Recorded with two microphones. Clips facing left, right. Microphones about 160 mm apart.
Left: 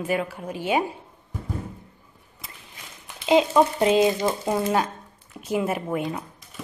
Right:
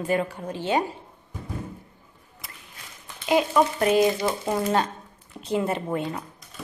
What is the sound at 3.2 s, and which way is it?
Speech, 20° left (ahead or behind).